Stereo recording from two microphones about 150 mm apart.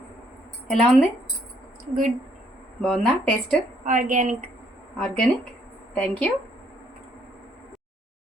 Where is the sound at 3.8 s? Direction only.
60° right (ahead or behind).